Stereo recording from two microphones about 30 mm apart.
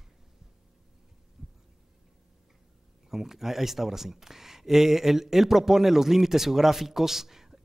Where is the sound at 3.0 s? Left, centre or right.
Centre.